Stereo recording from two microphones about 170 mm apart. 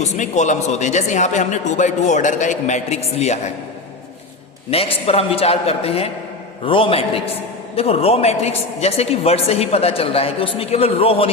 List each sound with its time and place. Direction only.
0.0 s speech: 45° left (ahead or behind)
4.7 s a man's voice: 35° left (ahead or behind)